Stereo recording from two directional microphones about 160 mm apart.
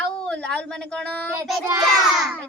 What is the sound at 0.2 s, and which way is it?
A child's voice, 5° left (ahead or behind).